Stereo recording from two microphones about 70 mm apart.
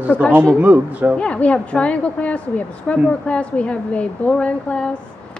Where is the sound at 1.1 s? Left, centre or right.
Centre.